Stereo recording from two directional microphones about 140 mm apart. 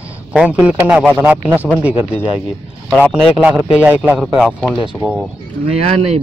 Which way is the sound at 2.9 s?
5° left (ahead or behind).